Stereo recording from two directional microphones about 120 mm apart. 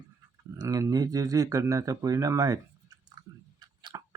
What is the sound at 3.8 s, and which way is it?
Tick-tock, 40° right (ahead or behind).